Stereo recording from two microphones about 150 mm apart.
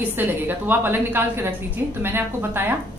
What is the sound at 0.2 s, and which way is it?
A woman's voice, 10° right (ahead or behind).